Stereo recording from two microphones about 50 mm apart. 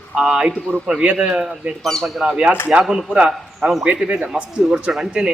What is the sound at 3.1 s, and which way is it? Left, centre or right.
A man's voice, centre.